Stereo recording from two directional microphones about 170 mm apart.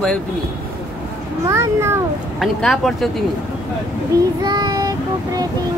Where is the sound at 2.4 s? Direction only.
Centre (ahead or behind).